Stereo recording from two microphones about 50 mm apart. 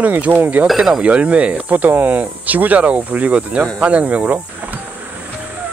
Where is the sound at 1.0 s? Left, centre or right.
Right.